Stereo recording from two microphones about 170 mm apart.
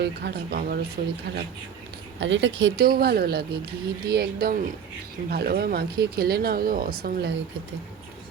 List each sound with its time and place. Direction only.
0.0 s speech: 75° right (ahead or behind)
1.0 s speech: 60° right (ahead or behind)
2.2 s speech: 90° right; by 7.3 s 70° right (ahead or behind)